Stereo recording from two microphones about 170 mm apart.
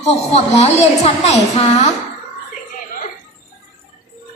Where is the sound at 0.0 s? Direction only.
40° left (ahead or behind).